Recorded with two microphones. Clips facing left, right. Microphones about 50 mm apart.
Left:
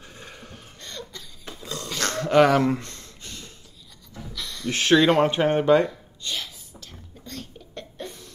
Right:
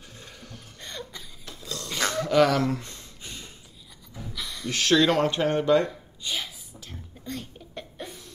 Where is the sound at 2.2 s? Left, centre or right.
Left.